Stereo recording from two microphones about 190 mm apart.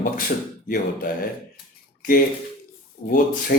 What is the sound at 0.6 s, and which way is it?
Speech, 50° left (ahead or behind).